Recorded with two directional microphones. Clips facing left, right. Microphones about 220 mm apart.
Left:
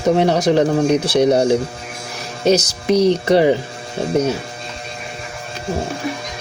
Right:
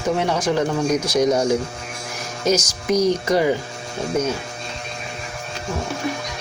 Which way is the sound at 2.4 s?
35° left (ahead or behind).